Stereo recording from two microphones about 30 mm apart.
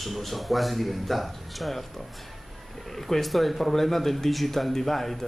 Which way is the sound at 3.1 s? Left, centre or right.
Centre.